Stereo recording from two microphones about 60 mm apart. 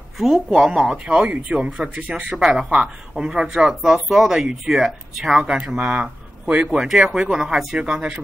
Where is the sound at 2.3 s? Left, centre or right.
Centre.